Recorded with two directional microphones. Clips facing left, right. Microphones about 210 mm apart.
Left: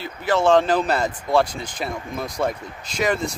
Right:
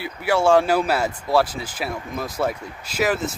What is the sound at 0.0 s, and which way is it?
Speech, 10° right (ahead or behind).